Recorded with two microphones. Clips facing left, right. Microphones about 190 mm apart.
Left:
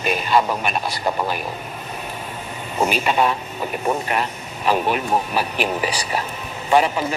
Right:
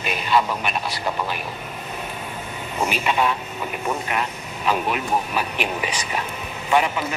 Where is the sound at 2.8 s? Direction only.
40° left (ahead or behind).